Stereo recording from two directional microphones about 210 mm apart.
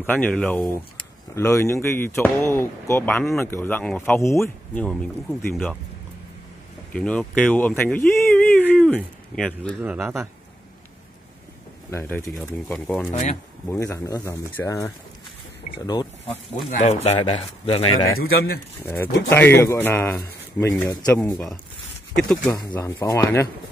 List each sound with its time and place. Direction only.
0.0 s speech: 10° left (ahead or behind)
6.9 s speech: 5° left (ahead or behind)
9.8 s speech: 10° right (ahead or behind)
11.9 s speech: 10° left (ahead or behind)
16.6 s speech: 35° left (ahead or behind)
18.2 s speech: 50° left (ahead or behind)
18.8 s speech: 10° left (ahead or behind)
22.5 s speech: 15° left (ahead or behind)